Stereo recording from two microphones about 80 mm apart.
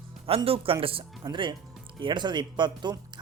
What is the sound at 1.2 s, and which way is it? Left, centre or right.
Speech, right.